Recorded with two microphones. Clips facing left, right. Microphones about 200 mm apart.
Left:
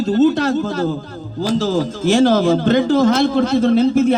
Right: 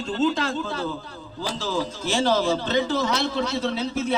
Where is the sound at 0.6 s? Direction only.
45° left (ahead or behind).